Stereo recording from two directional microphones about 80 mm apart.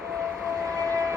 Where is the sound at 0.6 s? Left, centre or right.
Right.